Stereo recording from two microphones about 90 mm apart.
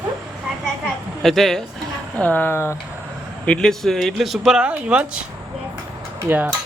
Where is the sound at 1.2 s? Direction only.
5° left (ahead or behind).